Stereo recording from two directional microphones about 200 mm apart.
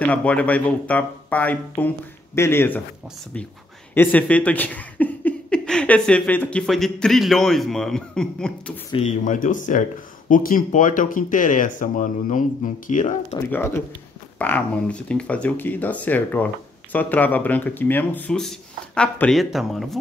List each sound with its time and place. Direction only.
0.0 s speech: 5° left (ahead or behind)
3.9 s speech: 10° left (ahead or behind)
8.9 s speech: 35° left (ahead or behind)
13.5 s speech: 10° left (ahead or behind)